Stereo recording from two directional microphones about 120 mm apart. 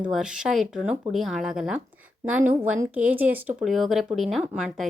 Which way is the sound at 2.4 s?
15° right (ahead or behind).